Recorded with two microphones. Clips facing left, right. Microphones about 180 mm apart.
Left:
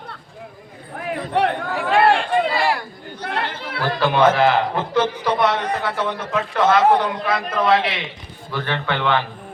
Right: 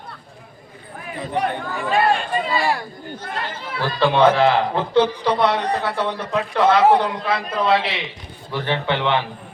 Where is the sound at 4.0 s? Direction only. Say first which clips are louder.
Right 1 dB; 30° right (ahead or behind).